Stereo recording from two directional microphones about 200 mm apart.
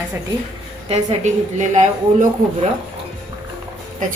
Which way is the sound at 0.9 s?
35° right (ahead or behind).